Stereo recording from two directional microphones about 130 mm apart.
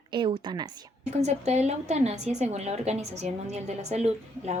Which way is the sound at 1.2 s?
60° right (ahead or behind).